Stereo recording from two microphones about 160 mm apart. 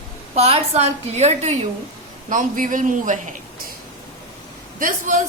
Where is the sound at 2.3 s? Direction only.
55° right (ahead or behind).